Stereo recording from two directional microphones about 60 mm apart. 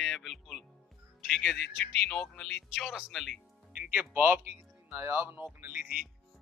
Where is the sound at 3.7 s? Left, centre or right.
Right.